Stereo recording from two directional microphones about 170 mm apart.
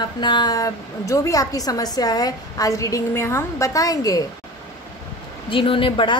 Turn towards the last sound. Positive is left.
turn(degrees=30)  # may be behind; listen again after turning